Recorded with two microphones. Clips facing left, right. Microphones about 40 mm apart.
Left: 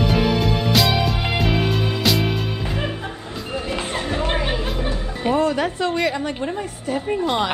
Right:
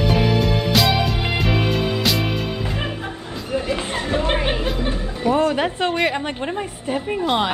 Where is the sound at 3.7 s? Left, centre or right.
Right.